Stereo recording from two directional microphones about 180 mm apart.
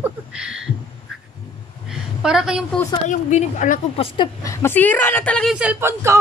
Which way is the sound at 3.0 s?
45° left (ahead or behind).